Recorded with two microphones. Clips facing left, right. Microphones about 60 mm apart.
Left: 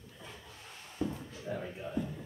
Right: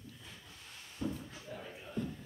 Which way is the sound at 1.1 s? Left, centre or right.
Left.